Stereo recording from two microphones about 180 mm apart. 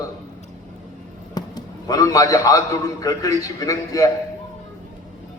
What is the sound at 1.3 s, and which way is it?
A man's voice, 20° left (ahead or behind).